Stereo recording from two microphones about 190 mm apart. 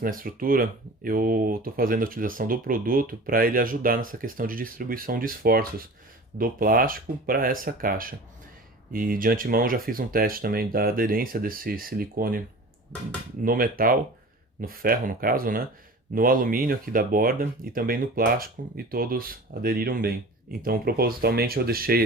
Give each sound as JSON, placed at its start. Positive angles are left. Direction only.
{"t": 0.0, "sound": "speech", "side_deg": -45}
{"t": 13.4, "sound": "speech", "side_deg": -50}